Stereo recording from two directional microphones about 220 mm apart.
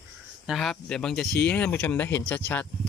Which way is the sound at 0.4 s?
Centre (ahead or behind).